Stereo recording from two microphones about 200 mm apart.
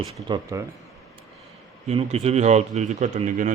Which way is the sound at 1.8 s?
30° right (ahead or behind).